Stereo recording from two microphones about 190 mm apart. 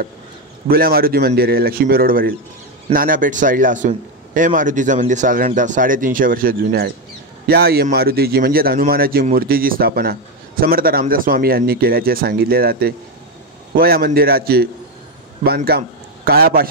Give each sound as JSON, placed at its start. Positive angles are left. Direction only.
{"t": 0.7, "sound": "a man's voice", "side_deg": -50}